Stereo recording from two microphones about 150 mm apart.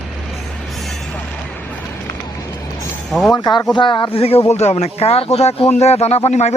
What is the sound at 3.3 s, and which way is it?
Speech, 25° left (ahead or behind).